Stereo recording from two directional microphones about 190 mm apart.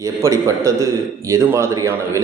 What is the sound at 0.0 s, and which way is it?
A man's voice, 15° right (ahead or behind).